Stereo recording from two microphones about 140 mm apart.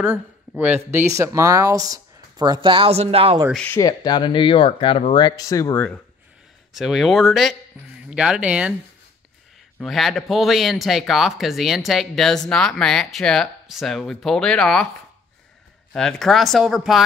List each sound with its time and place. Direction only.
0.0 s speech: 10° right (ahead or behind); by 3.3 s 45° right (ahead or behind)
3.5 s speech: 10° left (ahead or behind)
3.8 s speech: 30° left (ahead or behind)
6.7 s speech: 5° right (ahead or behind)
9.8 s speech: centre (ahead or behind)
15.9 s speech: 5° left (ahead or behind)